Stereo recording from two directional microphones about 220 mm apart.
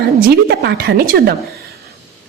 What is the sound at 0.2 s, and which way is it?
Speech, 45° right (ahead or behind).